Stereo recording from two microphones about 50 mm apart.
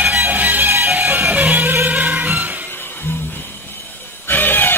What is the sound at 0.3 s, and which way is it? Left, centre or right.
Music, right.